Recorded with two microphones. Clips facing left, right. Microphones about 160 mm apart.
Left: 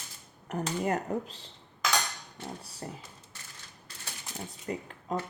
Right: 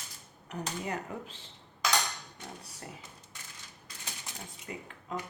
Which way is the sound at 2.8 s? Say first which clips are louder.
Left 6 dB; 30° left (ahead or behind).